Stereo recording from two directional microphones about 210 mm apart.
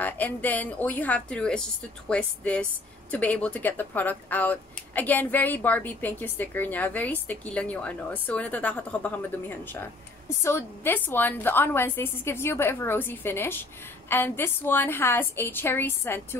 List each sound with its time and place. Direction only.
0.0 s a woman's voice: 10° left (ahead or behind)